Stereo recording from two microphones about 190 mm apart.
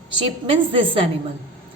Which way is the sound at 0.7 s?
30° right (ahead or behind).